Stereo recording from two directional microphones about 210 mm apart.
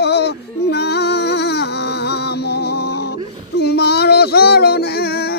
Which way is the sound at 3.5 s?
50° left (ahead or behind).